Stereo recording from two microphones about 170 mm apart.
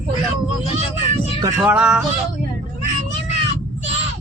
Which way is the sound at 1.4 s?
20° right (ahead or behind).